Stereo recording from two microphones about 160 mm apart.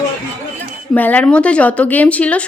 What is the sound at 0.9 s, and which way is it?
Speech, 10° left (ahead or behind).